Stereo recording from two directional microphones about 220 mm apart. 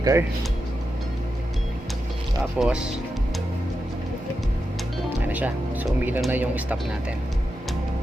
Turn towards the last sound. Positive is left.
turn(degrees=-10)  # may be behind; listen again after turning